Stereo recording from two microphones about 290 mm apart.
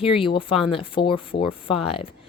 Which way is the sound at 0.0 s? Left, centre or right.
Centre.